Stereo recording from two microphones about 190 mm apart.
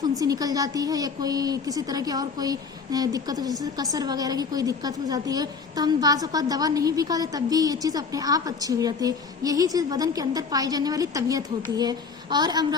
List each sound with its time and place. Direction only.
0.0 s a woman's voice: 20° right (ahead or behind)